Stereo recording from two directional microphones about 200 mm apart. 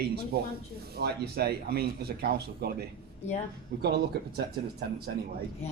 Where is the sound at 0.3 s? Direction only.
50° right (ahead or behind).